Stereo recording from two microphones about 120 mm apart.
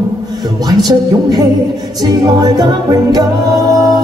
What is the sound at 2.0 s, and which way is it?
Music, 35° right (ahead or behind).